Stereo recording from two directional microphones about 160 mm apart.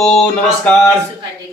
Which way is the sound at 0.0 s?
5° left (ahead or behind).